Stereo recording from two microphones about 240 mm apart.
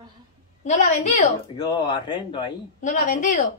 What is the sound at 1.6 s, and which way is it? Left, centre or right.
Speech, centre.